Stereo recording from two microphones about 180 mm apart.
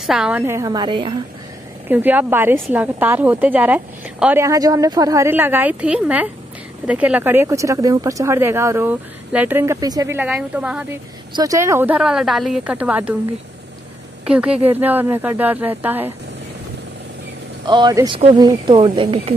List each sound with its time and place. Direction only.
0.0 s a woman's voice: 5° right (ahead or behind); by 1.1 s 25° right (ahead or behind)
1.9 s a woman's voice: 10° right (ahead or behind)
11.3 s a woman's voice: 20° right (ahead or behind)
14.2 s a woman's voice: 5° right (ahead or behind)
17.6 s speech: 25° right (ahead or behind)